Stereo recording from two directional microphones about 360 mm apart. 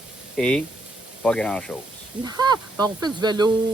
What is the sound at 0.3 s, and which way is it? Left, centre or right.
Speech, centre.